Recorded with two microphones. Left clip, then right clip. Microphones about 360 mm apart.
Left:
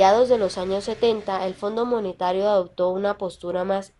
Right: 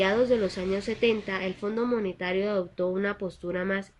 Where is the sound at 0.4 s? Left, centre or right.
Left.